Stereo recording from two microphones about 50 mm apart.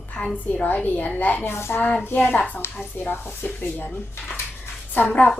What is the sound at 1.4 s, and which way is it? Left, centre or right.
Speech, left.